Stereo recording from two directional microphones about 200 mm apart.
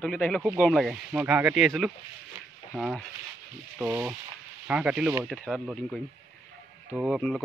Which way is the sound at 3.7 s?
10° right (ahead or behind).